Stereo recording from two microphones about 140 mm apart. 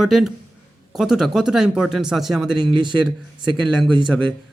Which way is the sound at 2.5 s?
35° right (ahead or behind).